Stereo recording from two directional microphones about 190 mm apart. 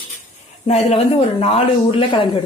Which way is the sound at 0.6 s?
35° left (ahead or behind).